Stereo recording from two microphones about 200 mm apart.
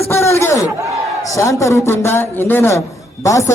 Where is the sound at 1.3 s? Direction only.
15° left (ahead or behind).